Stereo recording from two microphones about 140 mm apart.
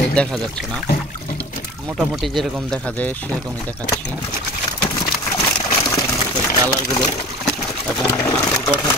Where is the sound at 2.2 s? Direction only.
Centre (ahead or behind).